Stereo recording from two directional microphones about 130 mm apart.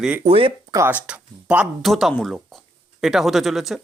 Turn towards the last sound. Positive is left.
turn(degrees=0)  # may be behind; listen again after turning